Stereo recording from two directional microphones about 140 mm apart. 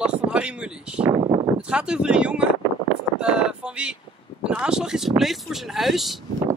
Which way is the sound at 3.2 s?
5° right (ahead or behind).